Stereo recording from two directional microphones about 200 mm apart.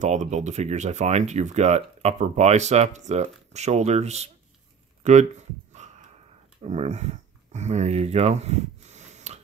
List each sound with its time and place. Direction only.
0.0 s speech: 35° right (ahead or behind)
5.0 s a sound: 35° right (ahead or behind)
6.6 s speech: 35° right (ahead or behind)